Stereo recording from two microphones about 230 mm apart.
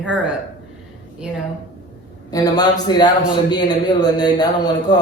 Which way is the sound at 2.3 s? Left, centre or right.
Centre.